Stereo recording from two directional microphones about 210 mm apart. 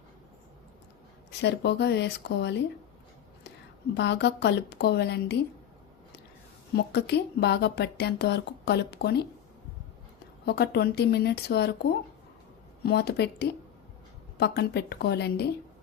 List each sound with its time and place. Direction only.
1.3 s a woman's voice: 55° left (ahead or behind)
3.9 s a woman's voice: 55° left (ahead or behind)
6.7 s speech: 50° left (ahead or behind)
10.4 s speech: 50° left (ahead or behind)